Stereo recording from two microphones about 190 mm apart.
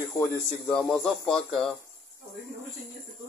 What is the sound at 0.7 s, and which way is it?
Speech, centre (ahead or behind).